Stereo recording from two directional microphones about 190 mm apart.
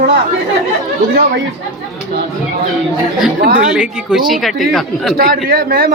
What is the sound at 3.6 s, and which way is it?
A woman's voice, 5° right (ahead or behind).